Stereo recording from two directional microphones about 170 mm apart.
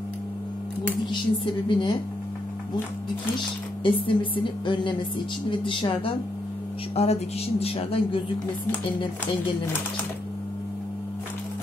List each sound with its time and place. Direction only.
1.1 s speech: 25° left (ahead or behind)
3.8 s a woman's voice: 30° left (ahead or behind)